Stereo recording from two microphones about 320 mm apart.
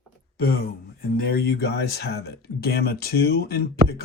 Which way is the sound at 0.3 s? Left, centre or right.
Left.